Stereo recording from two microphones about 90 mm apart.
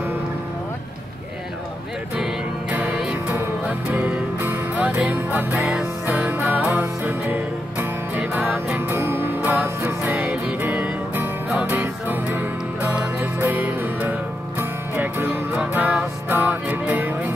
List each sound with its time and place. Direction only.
3.1 s music: 15° right (ahead or behind)